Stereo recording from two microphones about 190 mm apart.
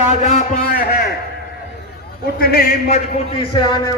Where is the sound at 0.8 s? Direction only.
50° left (ahead or behind).